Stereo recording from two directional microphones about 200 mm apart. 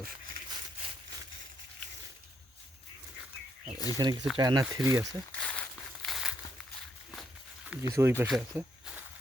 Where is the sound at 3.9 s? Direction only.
20° right (ahead or behind).